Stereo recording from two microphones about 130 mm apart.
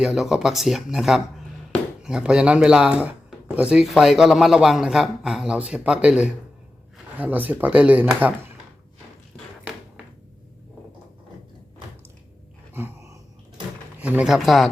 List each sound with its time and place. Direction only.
0.0 s speech: 5° right (ahead or behind)
12.7 s a sound: 20° right (ahead or behind)
14.0 s speech: 10° right (ahead or behind)